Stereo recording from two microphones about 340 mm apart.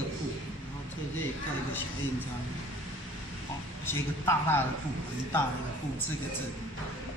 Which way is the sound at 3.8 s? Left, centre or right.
Centre.